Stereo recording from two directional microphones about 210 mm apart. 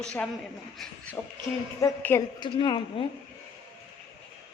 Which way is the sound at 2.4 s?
20° left (ahead or behind).